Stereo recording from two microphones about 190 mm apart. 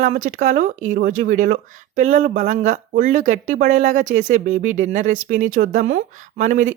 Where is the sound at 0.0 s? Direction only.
40° right (ahead or behind).